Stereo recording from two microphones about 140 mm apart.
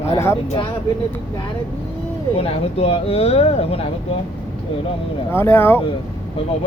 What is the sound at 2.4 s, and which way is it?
Speech, 45° left (ahead or behind).